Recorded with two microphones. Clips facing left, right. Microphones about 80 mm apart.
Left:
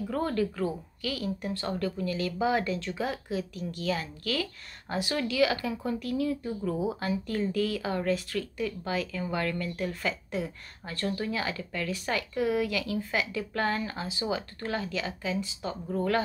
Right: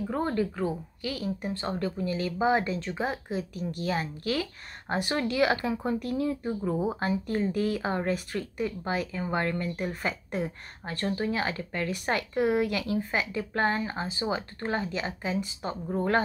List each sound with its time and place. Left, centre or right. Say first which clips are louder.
0.0 s speech: right 1 dB; right
6.8 s speech: right 2 dB; right
10.0 s speech: right 1 dB; right
11.1 s speech: right 2 dB; right
11.9 s speech: right 2 dB; right